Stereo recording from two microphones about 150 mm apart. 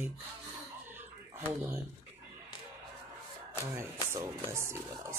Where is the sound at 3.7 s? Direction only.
20° right (ahead or behind).